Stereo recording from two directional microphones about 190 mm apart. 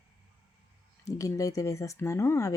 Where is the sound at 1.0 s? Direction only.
15° left (ahead or behind).